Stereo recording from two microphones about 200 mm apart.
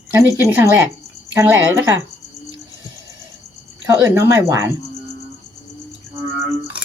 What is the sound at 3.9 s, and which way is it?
Speech, 15° right (ahead or behind).